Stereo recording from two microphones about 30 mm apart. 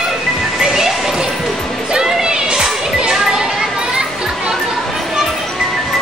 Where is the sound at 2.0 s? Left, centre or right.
Right.